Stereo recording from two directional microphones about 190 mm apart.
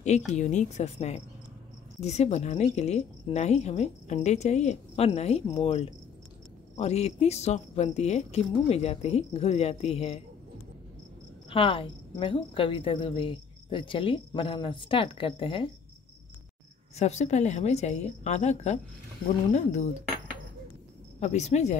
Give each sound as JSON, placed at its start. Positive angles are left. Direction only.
{"t": 0.4, "sound": "a woman's voice", "side_deg": 40}
{"t": 11.5, "sound": "a woman's voice", "side_deg": 30}
{"t": 16.9, "sound": "a woman's voice", "side_deg": 35}
{"t": 21.2, "sound": "a woman's voice", "side_deg": 35}